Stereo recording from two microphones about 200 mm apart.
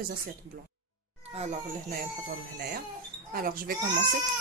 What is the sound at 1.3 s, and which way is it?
Speech, 30° right (ahead or behind).